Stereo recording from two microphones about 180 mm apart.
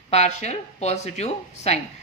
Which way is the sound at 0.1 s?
40° left (ahead or behind).